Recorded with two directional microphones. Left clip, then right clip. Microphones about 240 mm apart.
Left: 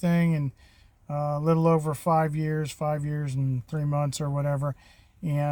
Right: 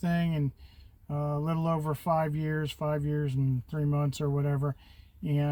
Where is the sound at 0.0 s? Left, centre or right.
Left.